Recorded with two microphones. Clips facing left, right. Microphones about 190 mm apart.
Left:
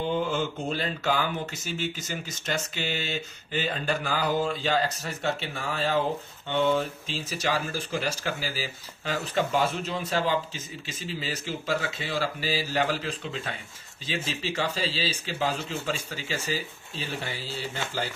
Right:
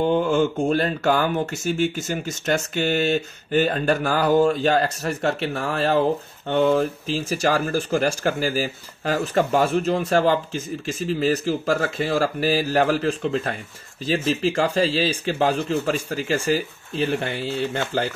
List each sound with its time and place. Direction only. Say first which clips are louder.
0.0 s speech: right 8 dB; 55° right (ahead or behind)
6.6 s speech: right 6 dB; 35° right (ahead or behind)
7.2 s speech: right 7 dB; 50° right (ahead or behind)
17.0 s speech: right 11 dB; 70° right (ahead or behind)